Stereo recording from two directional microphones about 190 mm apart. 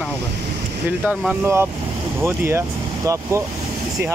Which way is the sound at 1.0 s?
10° right (ahead or behind).